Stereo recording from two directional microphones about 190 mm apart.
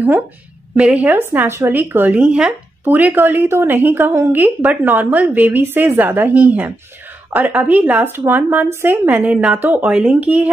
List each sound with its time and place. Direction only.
0.7 s speech: 5° right (ahead or behind)